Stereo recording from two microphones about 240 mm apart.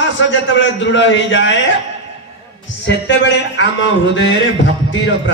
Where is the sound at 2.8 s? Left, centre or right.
Left.